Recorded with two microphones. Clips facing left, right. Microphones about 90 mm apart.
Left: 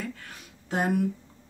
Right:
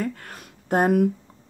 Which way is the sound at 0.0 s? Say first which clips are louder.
Right 8 dB; 50° right (ahead or behind).